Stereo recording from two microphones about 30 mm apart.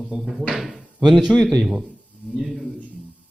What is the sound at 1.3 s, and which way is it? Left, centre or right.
Speech, right.